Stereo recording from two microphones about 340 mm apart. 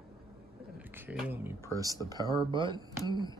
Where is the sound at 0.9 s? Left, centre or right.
Centre.